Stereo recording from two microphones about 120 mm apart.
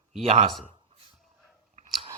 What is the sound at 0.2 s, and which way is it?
Speech, 55° right (ahead or behind).